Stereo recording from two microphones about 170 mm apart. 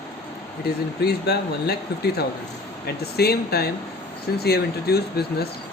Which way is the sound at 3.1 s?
70° left (ahead or behind).